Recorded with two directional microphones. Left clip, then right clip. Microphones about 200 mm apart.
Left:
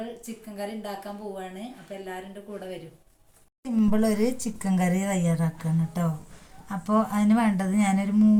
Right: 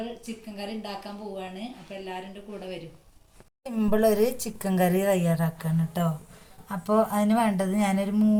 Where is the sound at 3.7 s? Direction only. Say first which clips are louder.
Right 3 dB; 30° right (ahead or behind).